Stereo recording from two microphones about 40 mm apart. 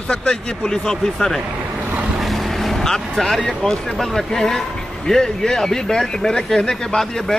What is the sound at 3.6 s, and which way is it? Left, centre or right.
Speech, centre.